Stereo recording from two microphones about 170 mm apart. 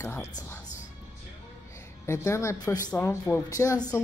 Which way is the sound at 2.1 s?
15° left (ahead or behind).